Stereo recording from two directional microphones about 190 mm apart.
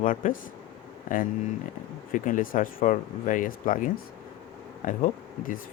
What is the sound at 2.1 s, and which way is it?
Speech, 45° left (ahead or behind).